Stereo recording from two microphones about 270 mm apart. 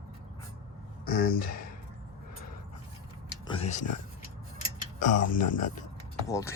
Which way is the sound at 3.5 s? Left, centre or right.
Left.